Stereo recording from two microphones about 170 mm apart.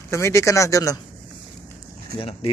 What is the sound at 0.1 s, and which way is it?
Speech, 15° left (ahead or behind).